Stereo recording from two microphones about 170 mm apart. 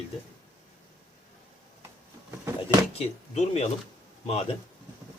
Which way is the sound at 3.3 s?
40° left (ahead or behind).